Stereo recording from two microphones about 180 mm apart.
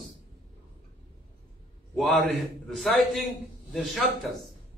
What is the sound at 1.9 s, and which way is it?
A man's voice, centre (ahead or behind).